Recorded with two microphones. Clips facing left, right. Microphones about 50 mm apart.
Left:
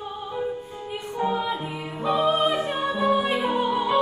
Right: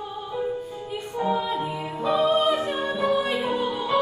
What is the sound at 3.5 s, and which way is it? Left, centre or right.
Music, left.